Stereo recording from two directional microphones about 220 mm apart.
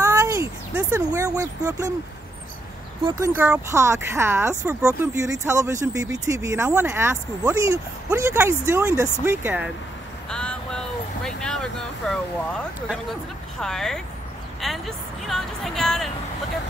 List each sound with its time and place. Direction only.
0.0 s a sound: 15° right (ahead or behind)
3.0 s speech: 20° right (ahead or behind)
3.3 s speech: 5° right (ahead or behind)
10.3 s a sound: 5° left (ahead or behind)
11.2 s vehicle: 5° left (ahead or behind)
13.6 s speech: centre (ahead or behind)